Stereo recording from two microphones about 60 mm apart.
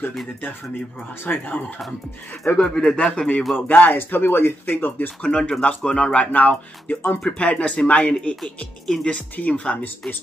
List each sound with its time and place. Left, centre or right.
1.2 s speech: left
2.5 s speech: centre
3.5 s speech: left; by 9.1 s centre
9.1 s speech: centre